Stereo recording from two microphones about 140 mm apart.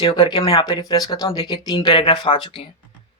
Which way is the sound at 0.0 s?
40° left (ahead or behind).